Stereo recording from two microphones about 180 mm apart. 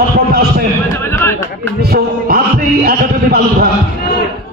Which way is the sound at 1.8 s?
55° right (ahead or behind).